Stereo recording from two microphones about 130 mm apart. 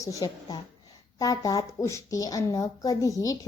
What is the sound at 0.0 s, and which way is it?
A woman's voice, 25° left (ahead or behind).